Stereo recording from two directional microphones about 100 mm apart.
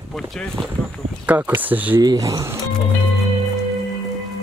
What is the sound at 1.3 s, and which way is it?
Speech, 15° right (ahead or behind).